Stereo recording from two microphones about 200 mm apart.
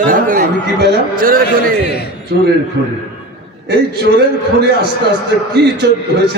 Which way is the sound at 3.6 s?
55° right (ahead or behind).